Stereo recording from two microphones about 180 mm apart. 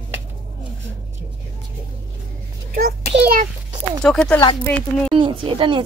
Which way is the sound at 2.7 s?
60° right (ahead or behind).